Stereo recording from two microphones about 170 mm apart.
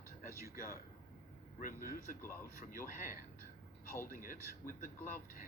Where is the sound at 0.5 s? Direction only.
60° left (ahead or behind).